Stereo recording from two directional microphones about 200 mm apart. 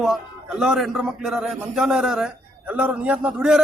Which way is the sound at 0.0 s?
Centre (ahead or behind).